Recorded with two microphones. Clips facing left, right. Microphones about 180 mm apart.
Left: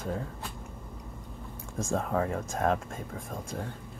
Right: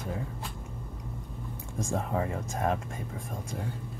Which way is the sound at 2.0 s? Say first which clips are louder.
Left 2 dB; 55° left (ahead or behind).